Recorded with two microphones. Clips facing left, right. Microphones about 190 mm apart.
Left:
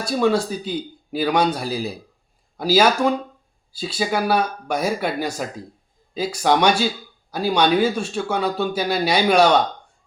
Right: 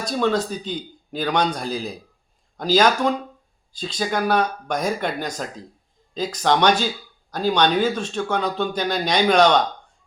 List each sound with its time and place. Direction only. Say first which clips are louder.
0.0 s speech: left 2 dB; 10° left (ahead or behind)